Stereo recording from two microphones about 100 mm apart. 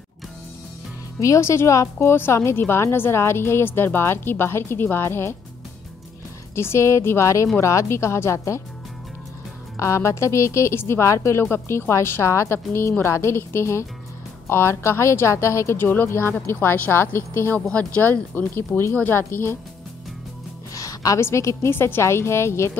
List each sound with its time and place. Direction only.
1.2 s a woman's voice: 30° left (ahead or behind)
6.5 s a woman's voice: 25° left (ahead or behind)
9.8 s a woman's voice: 30° left (ahead or behind)
17.6 s a woman's voice: 10° left (ahead or behind)
20.7 s a woman's voice: 35° left (ahead or behind)